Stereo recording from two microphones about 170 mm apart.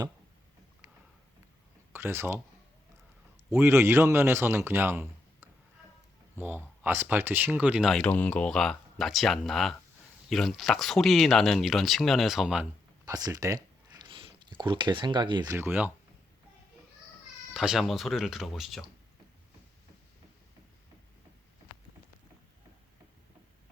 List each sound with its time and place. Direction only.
1.9 s speech: 15° right (ahead or behind)
3.5 s a man's voice: 15° right (ahead or behind)
13.1 s speech: 20° right (ahead or behind)
15.5 s a man's voice: 10° right (ahead or behind)
17.5 s speech: 5° right (ahead or behind)